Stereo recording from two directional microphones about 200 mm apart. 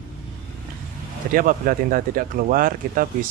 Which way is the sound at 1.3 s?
45° right (ahead or behind).